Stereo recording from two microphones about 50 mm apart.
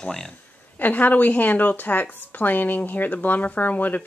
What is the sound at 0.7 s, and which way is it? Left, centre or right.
Speech, left.